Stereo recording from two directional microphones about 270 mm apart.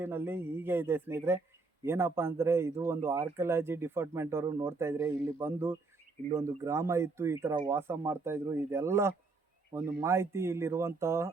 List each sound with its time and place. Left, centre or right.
0.0 s a man's voice: centre